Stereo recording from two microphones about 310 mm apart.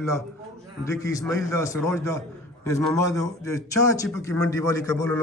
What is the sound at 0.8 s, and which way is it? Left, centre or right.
A man's voice, centre.